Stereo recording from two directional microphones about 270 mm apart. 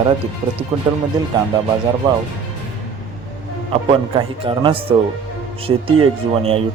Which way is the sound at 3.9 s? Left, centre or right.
Centre.